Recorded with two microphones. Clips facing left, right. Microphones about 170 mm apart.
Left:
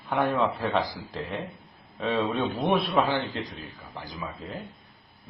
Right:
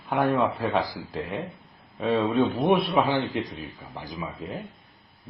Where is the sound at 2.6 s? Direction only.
20° right (ahead or behind).